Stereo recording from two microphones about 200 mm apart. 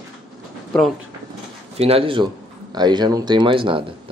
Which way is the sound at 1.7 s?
30° right (ahead or behind).